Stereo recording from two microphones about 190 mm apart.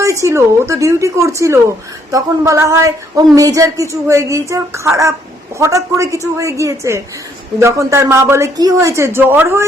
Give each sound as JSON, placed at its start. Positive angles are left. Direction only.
{"t": 0.0, "sound": "speech", "side_deg": -15}